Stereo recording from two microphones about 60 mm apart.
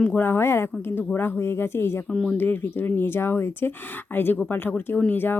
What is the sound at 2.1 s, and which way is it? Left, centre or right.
Speech, centre.